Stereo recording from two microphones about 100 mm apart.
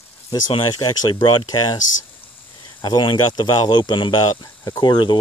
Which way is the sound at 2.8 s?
45° left (ahead or behind).